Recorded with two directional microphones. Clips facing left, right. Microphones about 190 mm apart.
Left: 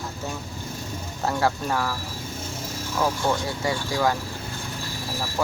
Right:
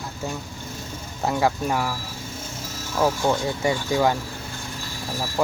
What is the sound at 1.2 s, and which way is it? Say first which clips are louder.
Speech: right 2 dB; 15° right (ahead or behind).